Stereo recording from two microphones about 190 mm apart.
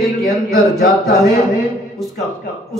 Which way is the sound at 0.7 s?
50° left (ahead or behind).